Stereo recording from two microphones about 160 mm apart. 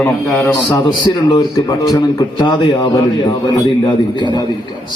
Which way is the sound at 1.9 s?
25° left (ahead or behind).